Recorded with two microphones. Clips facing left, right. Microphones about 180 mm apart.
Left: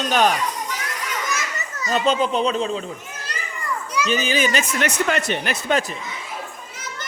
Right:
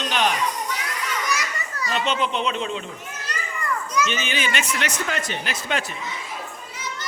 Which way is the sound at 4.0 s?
35° left (ahead or behind).